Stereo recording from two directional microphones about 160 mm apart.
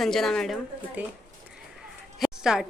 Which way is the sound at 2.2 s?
5° right (ahead or behind).